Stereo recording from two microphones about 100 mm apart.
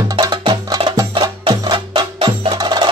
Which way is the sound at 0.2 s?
45° right (ahead or behind).